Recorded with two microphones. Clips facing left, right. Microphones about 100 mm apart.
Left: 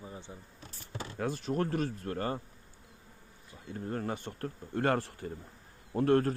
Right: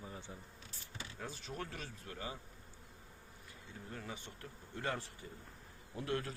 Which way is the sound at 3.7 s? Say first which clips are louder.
Left 12 dB; 55° left (ahead or behind).